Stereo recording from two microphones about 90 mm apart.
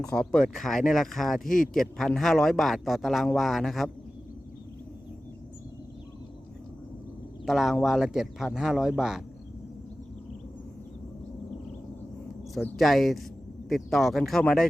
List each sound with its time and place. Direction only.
0.1 s speech: 5° left (ahead or behind)
7.4 s speech: 5° right (ahead or behind)
12.7 s speech: centre (ahead or behind)